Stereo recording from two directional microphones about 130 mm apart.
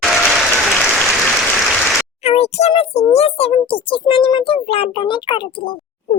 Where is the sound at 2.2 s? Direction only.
55° left (ahead or behind).